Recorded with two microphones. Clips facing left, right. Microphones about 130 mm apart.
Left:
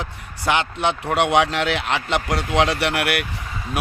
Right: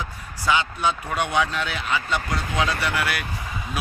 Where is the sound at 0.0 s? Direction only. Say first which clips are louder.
Left 2 dB; 70° left (ahead or behind).